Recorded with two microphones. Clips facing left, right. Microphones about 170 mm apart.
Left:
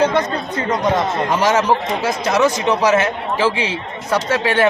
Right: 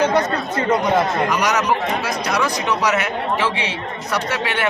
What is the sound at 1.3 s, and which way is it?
Speech, 25° left (ahead or behind).